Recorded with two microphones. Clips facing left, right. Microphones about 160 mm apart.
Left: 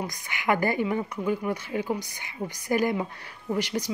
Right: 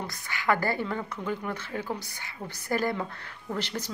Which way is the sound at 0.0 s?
15° left (ahead or behind).